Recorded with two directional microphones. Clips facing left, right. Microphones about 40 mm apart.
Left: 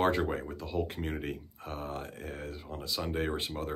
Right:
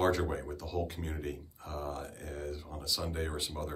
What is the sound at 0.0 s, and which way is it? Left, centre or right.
Speech, left.